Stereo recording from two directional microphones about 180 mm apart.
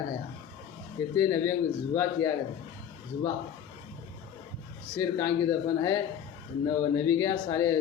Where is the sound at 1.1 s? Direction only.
20° left (ahead or behind).